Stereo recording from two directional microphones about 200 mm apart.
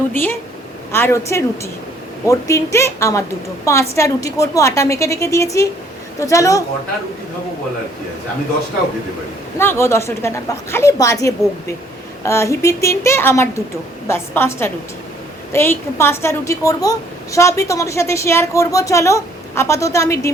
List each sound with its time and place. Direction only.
0.1 s a woman's voice: 10° left (ahead or behind)
9.6 s a woman's voice: 10° left (ahead or behind)